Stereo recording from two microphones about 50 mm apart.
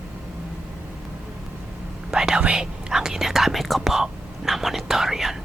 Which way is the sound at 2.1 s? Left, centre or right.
Centre.